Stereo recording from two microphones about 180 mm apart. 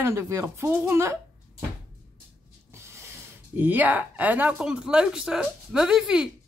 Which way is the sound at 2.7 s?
15° right (ahead or behind).